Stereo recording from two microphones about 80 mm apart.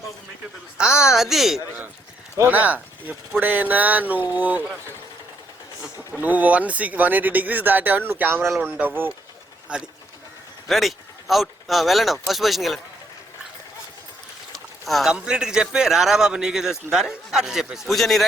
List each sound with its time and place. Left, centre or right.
0.8 s a woman's voice: centre
2.4 s speech: right
6.1 s speech: centre
10.7 s speech: centre
14.5 s boat: centre
15.1 s speech: centre